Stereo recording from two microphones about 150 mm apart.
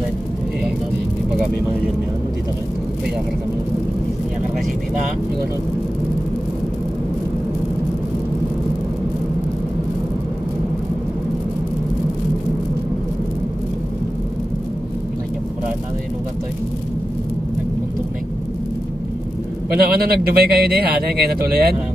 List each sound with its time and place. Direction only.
19.7 s a man's voice: 90° right